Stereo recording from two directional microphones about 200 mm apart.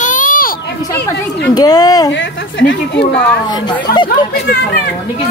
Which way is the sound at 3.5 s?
20° left (ahead or behind).